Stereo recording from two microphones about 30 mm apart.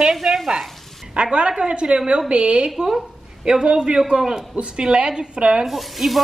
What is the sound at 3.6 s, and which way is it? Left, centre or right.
Speech, right.